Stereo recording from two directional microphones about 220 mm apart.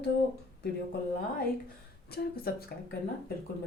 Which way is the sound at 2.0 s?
45° left (ahead or behind).